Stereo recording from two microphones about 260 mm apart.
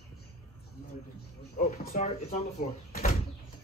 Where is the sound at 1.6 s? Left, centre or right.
Left.